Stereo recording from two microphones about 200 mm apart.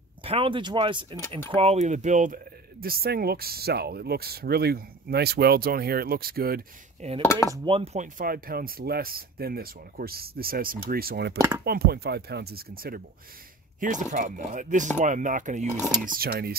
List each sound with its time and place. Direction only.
0.2 s speech: 25° right (ahead or behind); by 6.6 s 50° right (ahead or behind)
7.2 s dishes: 15° left (ahead or behind)
7.5 s speech: 25° right (ahead or behind); by 11.3 s 50° right (ahead or behind)
11.3 s speech: 15° right (ahead or behind)
11.6 s speech: 50° right (ahead or behind)
16.1 s speech: 50° right (ahead or behind)